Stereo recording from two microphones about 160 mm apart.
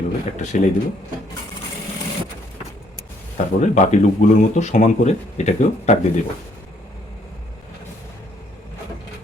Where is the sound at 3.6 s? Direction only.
45° left (ahead or behind).